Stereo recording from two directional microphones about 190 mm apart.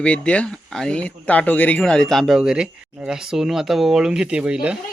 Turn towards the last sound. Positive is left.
turn(degrees=-5)  # may be behind; listen again after turning